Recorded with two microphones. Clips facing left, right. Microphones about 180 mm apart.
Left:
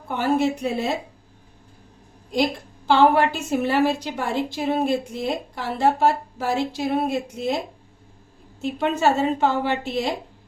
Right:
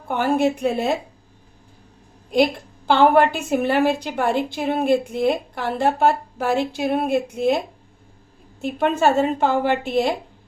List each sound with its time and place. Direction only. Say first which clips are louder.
0.1 s a woman's voice: right 2 dB; 55° right (ahead or behind)
2.3 s a woman's voice: right 4 dB; 60° right (ahead or behind)
8.6 s a woman's voice: right 2 dB; 55° right (ahead or behind)